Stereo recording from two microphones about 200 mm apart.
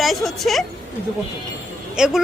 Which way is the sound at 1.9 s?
5° right (ahead or behind).